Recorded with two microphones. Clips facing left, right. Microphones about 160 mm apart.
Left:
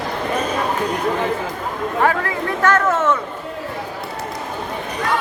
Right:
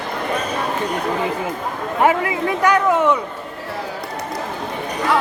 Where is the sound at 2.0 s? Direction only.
15° right (ahead or behind).